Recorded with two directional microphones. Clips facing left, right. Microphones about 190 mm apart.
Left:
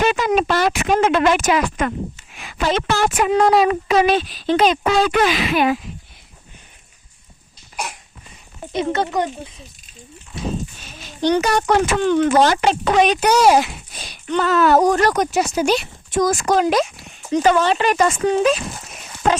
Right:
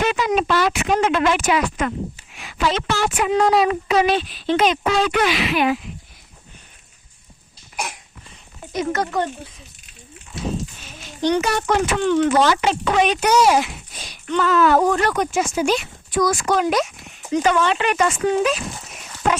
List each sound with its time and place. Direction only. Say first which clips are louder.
0.0 s speech: left 2 dB; 50° left (ahead or behind)
8.7 s speech: left 2 dB; 25° left (ahead or behind)
11.3 s speech: left 2 dB; 40° left (ahead or behind)